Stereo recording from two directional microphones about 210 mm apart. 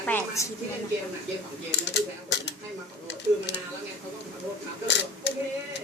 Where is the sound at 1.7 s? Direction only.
55° left (ahead or behind).